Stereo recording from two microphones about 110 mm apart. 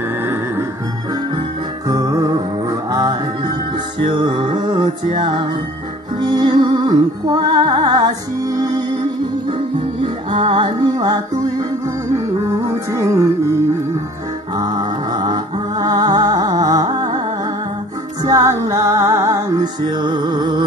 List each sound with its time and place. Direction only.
1.9 s music: 35° right (ahead or behind)
4.0 s music: 50° right (ahead or behind)
10.3 s music: 45° right (ahead or behind)
12.4 s music: 25° right (ahead or behind)
14.6 s music: 40° right (ahead or behind)
18.2 s music: 30° right (ahead or behind)